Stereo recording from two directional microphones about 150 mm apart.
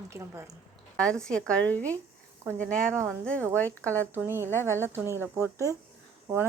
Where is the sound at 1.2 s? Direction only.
5° left (ahead or behind).